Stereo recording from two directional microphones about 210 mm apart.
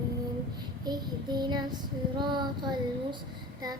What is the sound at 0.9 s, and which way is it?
Child singing, 20° right (ahead or behind).